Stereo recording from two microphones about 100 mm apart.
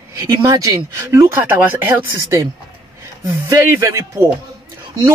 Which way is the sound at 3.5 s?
25° right (ahead or behind).